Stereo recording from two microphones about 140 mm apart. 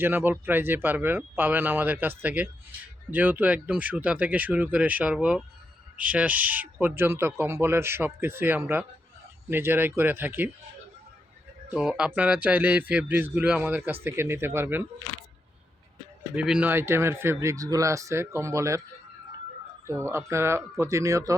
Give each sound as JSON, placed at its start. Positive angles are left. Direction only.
{"t": 0.0, "sound": "speech", "side_deg": -15}
{"t": 11.7, "sound": "speech", "side_deg": -5}
{"t": 16.3, "sound": "speech", "side_deg": -10}
{"t": 19.9, "sound": "speech", "side_deg": -20}